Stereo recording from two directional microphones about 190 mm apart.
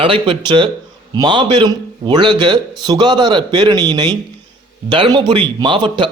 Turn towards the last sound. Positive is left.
turn(degrees=-25)  # may be behind; listen again after turning